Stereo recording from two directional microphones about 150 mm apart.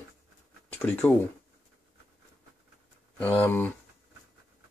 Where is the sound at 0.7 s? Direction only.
10° left (ahead or behind).